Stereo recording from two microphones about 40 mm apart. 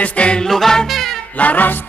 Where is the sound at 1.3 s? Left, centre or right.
Left.